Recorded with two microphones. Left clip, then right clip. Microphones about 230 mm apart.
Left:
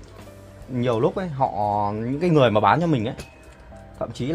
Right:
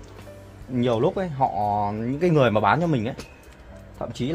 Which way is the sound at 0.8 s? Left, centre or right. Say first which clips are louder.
Even; centre.